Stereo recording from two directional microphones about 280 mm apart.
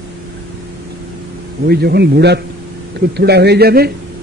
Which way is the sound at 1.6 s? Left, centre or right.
Right.